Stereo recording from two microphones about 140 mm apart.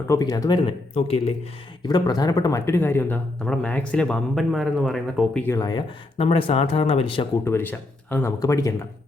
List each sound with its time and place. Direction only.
0.1 s speech: 25° left (ahead or behind); by 1.3 s 45° left (ahead or behind)
1.8 s speech: 30° left (ahead or behind); by 5.4 s centre (ahead or behind)
5.5 s speech: 30° left (ahead or behind)
6.1 s speech: 45° left (ahead or behind)
7.4 s speech: 15° left (ahead or behind)